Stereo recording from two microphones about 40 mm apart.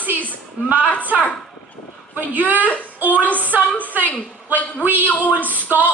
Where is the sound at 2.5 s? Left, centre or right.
Left.